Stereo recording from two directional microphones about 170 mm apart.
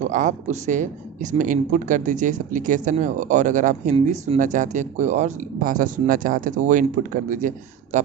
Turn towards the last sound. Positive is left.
turn(degrees=-50)  # may be behind; listen again after turning